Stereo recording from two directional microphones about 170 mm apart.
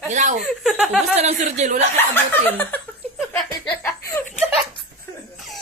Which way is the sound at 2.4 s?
10° left (ahead or behind).